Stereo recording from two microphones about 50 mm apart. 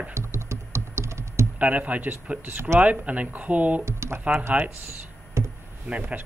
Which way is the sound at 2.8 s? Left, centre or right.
Right.